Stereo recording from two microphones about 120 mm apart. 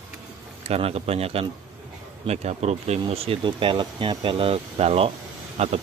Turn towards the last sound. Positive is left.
turn(degrees=-60)  # may be behind; listen again after turning